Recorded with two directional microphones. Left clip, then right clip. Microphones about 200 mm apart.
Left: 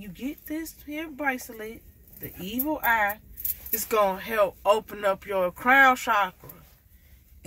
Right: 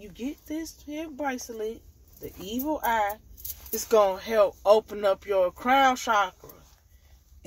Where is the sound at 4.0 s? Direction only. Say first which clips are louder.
Left 1 dB; 30° left (ahead or behind).